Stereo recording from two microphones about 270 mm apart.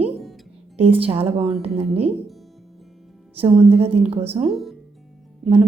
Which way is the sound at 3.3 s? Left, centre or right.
Right.